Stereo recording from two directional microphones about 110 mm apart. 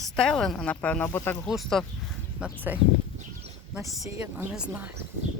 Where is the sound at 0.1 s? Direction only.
5° left (ahead or behind).